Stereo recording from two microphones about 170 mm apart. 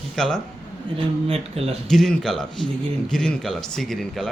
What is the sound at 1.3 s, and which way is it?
Speech, 35° right (ahead or behind).